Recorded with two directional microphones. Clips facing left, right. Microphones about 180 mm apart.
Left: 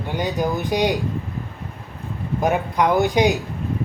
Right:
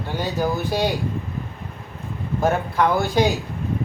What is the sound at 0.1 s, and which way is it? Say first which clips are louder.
Speech: left 1 dB; 15° left (ahead or behind).